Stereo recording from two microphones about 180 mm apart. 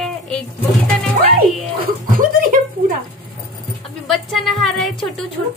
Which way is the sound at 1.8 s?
50° right (ahead or behind).